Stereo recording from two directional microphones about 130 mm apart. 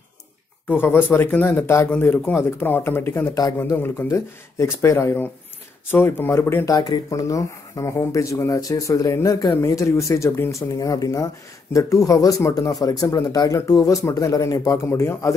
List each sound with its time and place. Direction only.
0.7 s speech: 15° left (ahead or behind)